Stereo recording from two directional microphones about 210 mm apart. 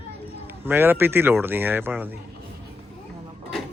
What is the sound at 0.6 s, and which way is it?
Speech, 10° right (ahead or behind).